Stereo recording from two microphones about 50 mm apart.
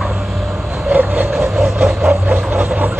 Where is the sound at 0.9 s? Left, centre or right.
Right.